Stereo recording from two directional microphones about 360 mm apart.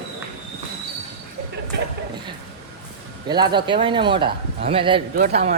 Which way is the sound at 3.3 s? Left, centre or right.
Centre.